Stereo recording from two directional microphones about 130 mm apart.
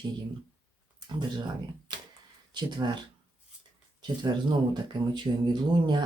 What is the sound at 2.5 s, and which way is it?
Speech, 35° right (ahead or behind).